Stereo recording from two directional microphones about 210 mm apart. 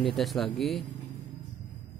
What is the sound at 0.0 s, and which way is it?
Speech, centre (ahead or behind).